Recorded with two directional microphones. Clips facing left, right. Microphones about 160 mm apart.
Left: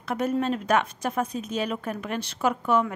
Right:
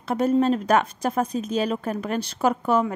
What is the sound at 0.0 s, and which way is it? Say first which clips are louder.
A woman's voice: right 5 dB; 30° right (ahead or behind).